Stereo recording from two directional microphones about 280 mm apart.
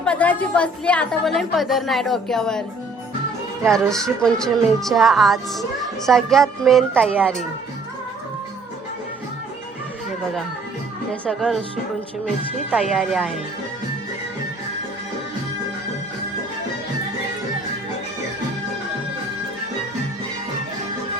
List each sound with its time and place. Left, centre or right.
0.0 s speech: centre
3.7 s speech: centre
11.1 s speech: centre
12.7 s speech: centre